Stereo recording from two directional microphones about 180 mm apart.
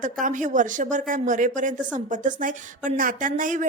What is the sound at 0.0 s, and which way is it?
Speech, 45° right (ahead or behind).